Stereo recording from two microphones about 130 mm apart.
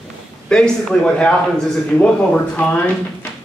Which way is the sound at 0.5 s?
5° left (ahead or behind).